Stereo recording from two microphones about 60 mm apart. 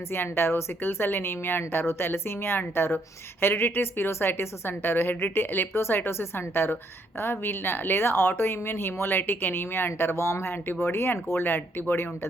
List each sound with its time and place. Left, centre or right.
0.1 s speech: left